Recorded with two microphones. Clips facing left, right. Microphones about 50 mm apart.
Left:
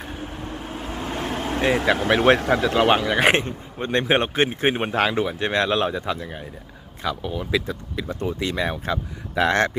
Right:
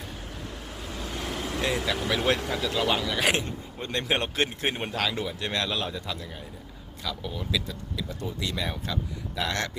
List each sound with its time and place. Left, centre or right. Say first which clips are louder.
0.0 s vehicle: left 6 dB; left
4.0 s speech: left 6 dB; left
7.7 s speech: left 6 dB; left